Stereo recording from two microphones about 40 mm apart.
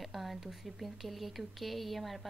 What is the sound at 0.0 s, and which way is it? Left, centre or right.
Speech, centre.